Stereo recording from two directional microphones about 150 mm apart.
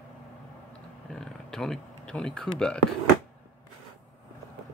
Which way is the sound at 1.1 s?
5° left (ahead or behind).